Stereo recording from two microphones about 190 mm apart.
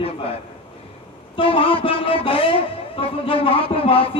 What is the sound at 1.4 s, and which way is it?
A man's voice, 30° left (ahead or behind).